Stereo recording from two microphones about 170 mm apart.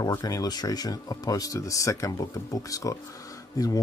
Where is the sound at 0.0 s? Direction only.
20° left (ahead or behind).